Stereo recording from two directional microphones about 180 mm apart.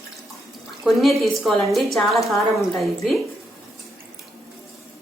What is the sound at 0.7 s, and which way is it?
A woman's voice, centre (ahead or behind).